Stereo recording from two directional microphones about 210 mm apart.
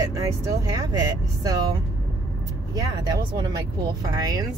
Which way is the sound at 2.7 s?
15° right (ahead or behind).